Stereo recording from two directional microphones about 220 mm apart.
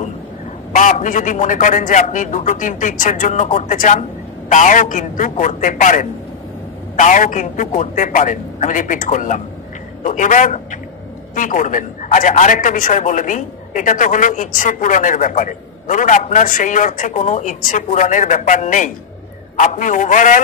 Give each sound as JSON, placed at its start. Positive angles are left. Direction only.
{"t": 0.7, "sound": "a man's voice", "side_deg": 35}